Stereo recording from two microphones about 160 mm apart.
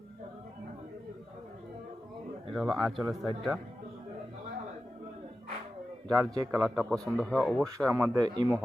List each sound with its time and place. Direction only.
2.5 s speech: centre (ahead or behind)
6.1 s speech: 25° right (ahead or behind)
6.6 s speech: centre (ahead or behind)
7.8 s speech: 15° right (ahead or behind)